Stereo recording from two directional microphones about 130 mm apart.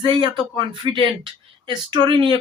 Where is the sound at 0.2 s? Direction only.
35° right (ahead or behind).